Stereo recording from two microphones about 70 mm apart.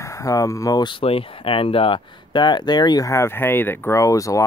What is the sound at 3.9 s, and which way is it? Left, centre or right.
Speech, left.